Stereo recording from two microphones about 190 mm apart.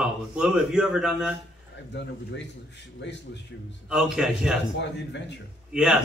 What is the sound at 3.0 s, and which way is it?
Speech, 65° left (ahead or behind).